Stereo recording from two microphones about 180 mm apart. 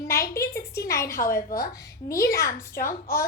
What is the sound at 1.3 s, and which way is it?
Speech, 50° left (ahead or behind).